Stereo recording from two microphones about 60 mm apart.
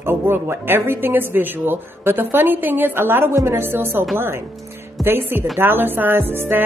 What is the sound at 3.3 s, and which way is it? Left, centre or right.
Speech, right.